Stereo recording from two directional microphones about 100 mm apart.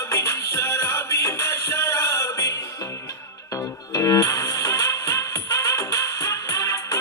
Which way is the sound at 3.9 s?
35° left (ahead or behind).